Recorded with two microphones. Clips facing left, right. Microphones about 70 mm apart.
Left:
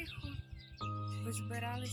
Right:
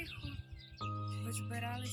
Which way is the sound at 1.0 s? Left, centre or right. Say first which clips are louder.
Left 1 dB; centre.